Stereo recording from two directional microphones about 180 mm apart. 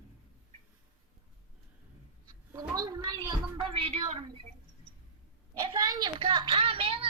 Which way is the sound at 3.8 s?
35° right (ahead or behind).